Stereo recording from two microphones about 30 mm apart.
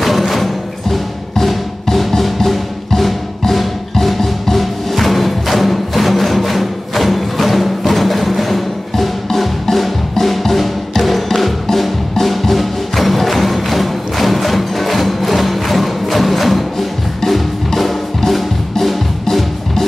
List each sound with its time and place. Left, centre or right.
0.0 s music: centre
17.2 s music: centre